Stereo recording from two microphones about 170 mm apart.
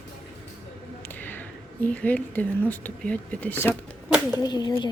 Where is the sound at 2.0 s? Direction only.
10° left (ahead or behind).